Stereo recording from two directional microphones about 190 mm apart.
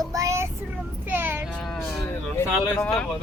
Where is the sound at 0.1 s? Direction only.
15° right (ahead or behind).